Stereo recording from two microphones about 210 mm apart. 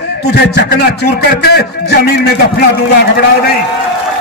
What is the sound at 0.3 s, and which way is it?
A man's voice, 50° left (ahead or behind).